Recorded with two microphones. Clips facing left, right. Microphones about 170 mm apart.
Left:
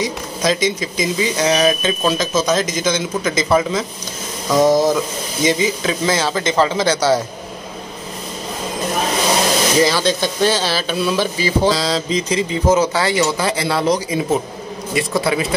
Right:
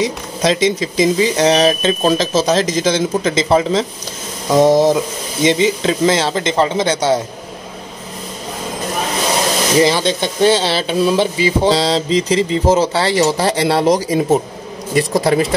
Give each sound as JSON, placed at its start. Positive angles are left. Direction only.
{"t": 0.0, "sound": "speech", "side_deg": -30}
{"t": 9.8, "sound": "speech", "side_deg": -20}